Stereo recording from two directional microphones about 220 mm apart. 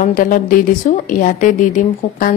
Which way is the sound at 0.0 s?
40° left (ahead or behind).